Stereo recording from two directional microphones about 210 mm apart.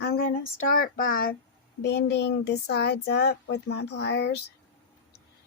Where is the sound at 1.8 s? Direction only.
55° left (ahead or behind).